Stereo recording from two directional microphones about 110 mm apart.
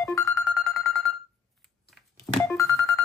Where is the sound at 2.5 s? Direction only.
30° left (ahead or behind).